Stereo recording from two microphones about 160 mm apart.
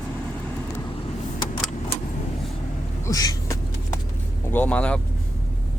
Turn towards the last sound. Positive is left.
turn(degrees=10)  # may be behind; listen again after turning